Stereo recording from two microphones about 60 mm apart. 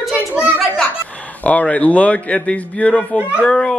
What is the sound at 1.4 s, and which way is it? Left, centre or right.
A man's voice, left.